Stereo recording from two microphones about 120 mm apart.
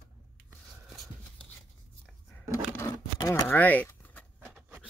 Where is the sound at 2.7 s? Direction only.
25° left (ahead or behind).